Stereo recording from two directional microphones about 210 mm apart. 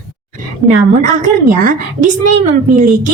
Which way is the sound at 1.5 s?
40° right (ahead or behind).